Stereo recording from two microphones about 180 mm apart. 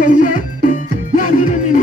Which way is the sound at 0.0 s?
45° left (ahead or behind).